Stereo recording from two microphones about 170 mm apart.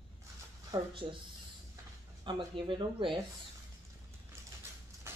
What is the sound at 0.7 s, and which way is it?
Speech, 30° right (ahead or behind).